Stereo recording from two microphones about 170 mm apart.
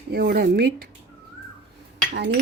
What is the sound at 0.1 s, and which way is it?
Speech, 65° right (ahead or behind).